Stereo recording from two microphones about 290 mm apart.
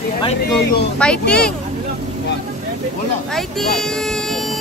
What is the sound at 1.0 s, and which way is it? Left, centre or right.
Speech, centre.